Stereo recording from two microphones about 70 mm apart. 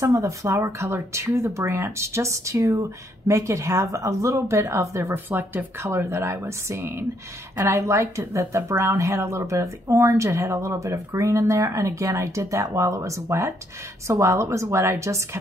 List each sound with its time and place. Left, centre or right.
0.0 s speech: right
5.1 s speech: right
5.9 s speech: right